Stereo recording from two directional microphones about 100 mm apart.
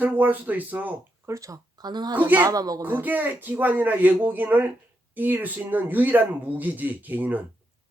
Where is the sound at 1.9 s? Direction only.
45° right (ahead or behind).